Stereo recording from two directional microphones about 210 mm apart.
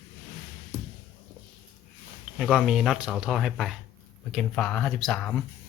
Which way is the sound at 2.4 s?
5° right (ahead or behind).